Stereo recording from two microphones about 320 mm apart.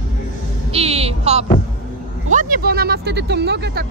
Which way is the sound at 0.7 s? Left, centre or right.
Centre.